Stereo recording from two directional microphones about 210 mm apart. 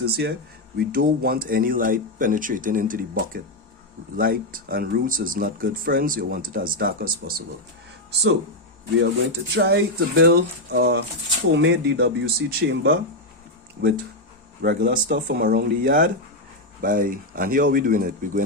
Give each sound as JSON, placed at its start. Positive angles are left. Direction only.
{"t": 0.0, "sound": "speech", "side_deg": -50}
{"t": 9.6, "sound": "speech", "side_deg": -50}